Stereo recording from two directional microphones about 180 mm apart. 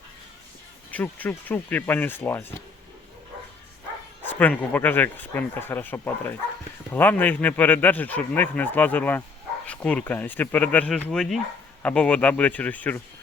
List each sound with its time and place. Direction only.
0.9 s speech: 10° left (ahead or behind)
4.2 s speech: 10° left (ahead or behind)